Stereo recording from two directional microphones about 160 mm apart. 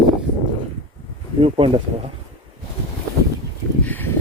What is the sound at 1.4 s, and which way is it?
Speech, 35° right (ahead or behind).